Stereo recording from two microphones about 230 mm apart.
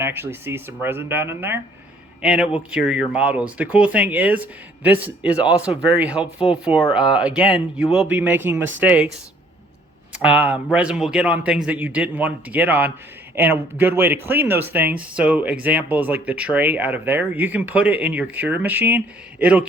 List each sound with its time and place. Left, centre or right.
0.0 s speech: centre
10.1 s speech: centre